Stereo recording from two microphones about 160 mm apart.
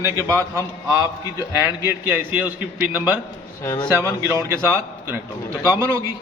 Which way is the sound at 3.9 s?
15° right (ahead or behind).